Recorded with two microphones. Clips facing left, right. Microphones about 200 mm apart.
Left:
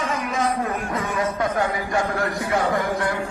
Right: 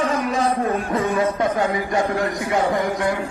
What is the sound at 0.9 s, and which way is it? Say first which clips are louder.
A man's voice: right 5 dB; 25° right (ahead or behind).